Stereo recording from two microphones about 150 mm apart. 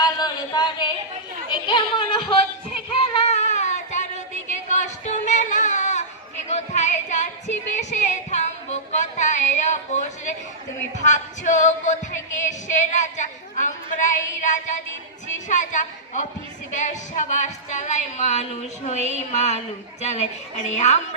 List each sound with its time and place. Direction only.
0.0 s a sound: 25° left (ahead or behind)
1.5 s music: 35° left (ahead or behind); by 6.1 s 55° left (ahead or behind)
6.5 s a sound: 50° left (ahead or behind)
11.0 s music: 55° left (ahead or behind)
16.7 s speech: 55° left (ahead or behind)
18.9 s a woman's voice: 45° right (ahead or behind)
19.3 s speech: 50° left (ahead or behind)